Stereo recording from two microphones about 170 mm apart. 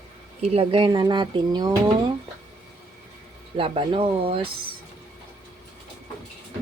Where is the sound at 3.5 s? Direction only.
30° right (ahead or behind).